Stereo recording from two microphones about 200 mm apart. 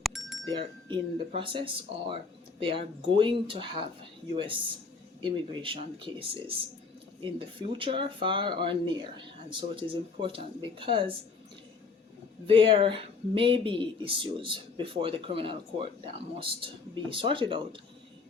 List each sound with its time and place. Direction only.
0.0 s chink: centre (ahead or behind)
0.5 s speech: 25° right (ahead or behind)
5.2 s speech: 25° right (ahead or behind)
12.5 s speech: 25° right (ahead or behind)